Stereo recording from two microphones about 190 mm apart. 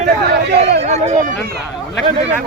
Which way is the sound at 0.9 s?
35° right (ahead or behind).